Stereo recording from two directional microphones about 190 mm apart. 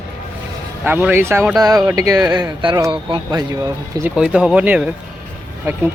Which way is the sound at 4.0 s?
5° right (ahead or behind).